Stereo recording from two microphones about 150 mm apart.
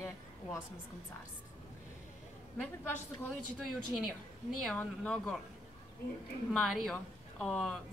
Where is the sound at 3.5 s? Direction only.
Centre (ahead or behind).